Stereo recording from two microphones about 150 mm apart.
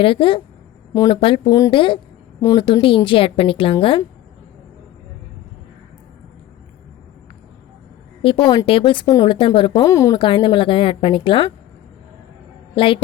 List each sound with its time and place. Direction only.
0.0 s a woman's voice: 35° left (ahead or behind)
8.2 s a woman's voice: 35° left (ahead or behind); by 10.2 s 20° left (ahead or behind)
10.2 s a woman's voice: 35° left (ahead or behind)
12.7 s a woman's voice: 35° left (ahead or behind)